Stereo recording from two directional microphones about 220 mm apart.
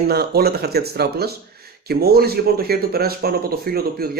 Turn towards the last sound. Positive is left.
turn(degrees=-45)  # may be behind; listen again after turning